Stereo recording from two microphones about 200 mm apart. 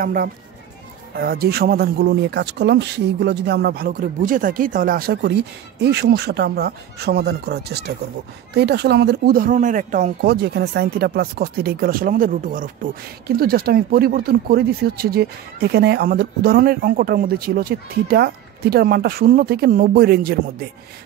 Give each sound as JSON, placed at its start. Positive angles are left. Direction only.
{"t": 0.0, "sound": "speech", "side_deg": -45}